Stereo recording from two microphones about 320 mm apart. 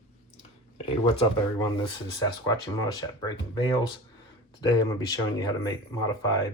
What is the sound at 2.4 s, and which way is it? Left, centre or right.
Speech, centre.